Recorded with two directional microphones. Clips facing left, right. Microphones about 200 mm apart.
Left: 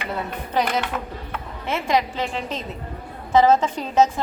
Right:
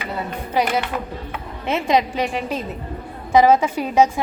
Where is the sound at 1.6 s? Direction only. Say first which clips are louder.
Right 3 dB; 20° right (ahead or behind).